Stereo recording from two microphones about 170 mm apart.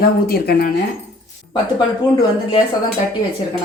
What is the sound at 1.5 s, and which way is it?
A woman's voice, 25° left (ahead or behind).